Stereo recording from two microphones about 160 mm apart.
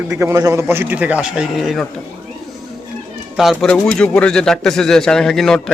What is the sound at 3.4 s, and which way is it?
Speech, centre (ahead or behind).